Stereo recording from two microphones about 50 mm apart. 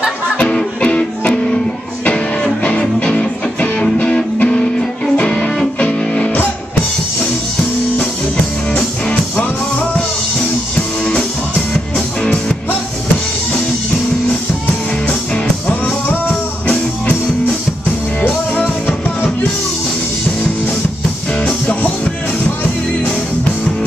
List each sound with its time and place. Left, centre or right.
0.4 s music: left
15.0 s music: left
18.2 s music: left
21.4 s music: left